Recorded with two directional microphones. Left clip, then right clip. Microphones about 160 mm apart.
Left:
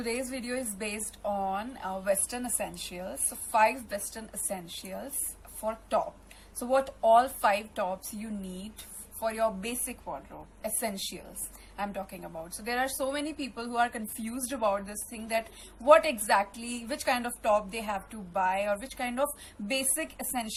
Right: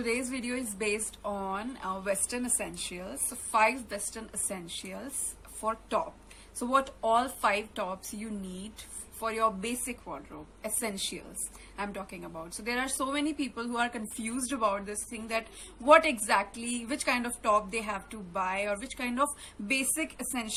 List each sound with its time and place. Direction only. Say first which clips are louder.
0.0 s a woman's voice: right 1 dB; 10° right (ahead or behind)
6.6 s a woman's voice: left 1 dB; 10° right (ahead or behind)
9.2 s a woman's voice: even; 10° right (ahead or behind)